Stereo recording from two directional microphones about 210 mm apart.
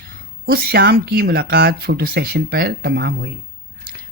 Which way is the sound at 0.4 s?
45° right (ahead or behind).